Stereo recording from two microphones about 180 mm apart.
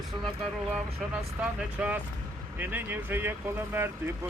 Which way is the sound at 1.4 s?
5° right (ahead or behind).